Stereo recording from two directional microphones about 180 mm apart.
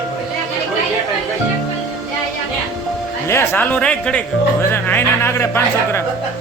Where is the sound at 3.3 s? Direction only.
10° left (ahead or behind).